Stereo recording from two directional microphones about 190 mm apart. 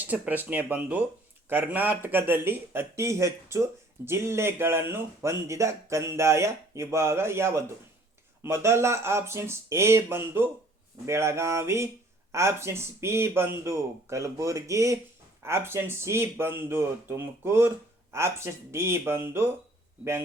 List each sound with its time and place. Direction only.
0.0 s speech: 10° right (ahead or behind)